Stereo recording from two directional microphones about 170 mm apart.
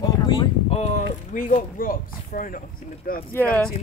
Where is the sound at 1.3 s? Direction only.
50° left (ahead or behind).